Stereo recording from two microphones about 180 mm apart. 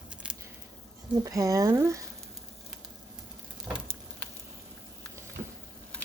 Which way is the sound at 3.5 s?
5° right (ahead or behind).